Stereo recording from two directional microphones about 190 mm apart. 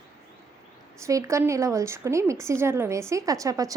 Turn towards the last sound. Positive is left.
turn(degrees=-20)  # may be behind; listen again after turning